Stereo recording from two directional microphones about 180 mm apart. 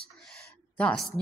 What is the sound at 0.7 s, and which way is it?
Speech, 5° left (ahead or behind).